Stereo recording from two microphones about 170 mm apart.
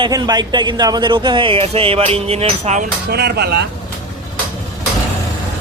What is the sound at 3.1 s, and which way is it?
Speech, 70° right (ahead or behind).